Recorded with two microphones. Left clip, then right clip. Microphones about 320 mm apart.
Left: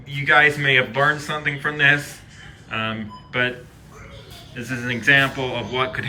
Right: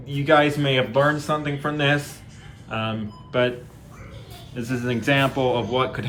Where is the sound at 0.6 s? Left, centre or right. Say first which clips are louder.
Left 2 dB; centre.